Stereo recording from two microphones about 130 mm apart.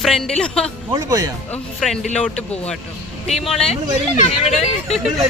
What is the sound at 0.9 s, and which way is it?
Speech, 25° right (ahead or behind).